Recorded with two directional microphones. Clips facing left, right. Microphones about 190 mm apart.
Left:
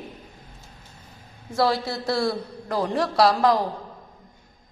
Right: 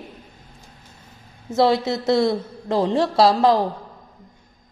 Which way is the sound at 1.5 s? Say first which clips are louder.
Right 5 dB; 25° right (ahead or behind).